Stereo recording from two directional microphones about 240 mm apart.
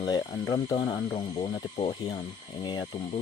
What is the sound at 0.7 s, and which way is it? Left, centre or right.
Speech, centre.